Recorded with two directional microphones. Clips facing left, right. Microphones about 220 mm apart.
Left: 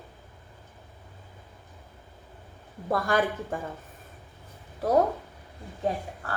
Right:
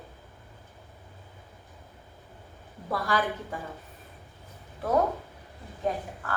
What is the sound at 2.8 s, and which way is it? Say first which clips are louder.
Speech: left 3 dB; 45° left (ahead or behind).